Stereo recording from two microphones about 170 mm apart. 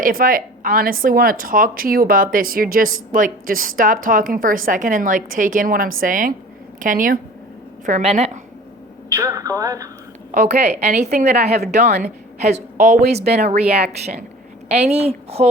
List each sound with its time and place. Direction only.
0.0 s a woman's voice: 55° right (ahead or behind); by 8.4 s 40° right (ahead or behind)
9.1 s speech: 20° right (ahead or behind)
10.3 s a woman's voice: 45° right (ahead or behind)